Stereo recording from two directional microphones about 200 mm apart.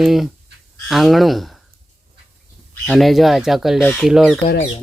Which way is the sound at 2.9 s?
Centre (ahead or behind).